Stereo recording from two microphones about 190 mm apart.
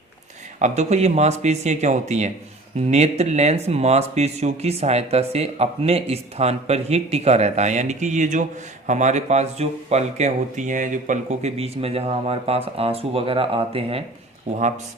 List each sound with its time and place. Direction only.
0.6 s speech: 35° right (ahead or behind)